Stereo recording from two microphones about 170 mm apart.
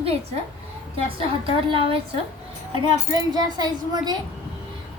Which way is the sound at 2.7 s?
25° right (ahead or behind).